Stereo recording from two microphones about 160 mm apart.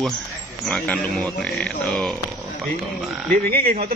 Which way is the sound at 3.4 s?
70° right (ahead or behind).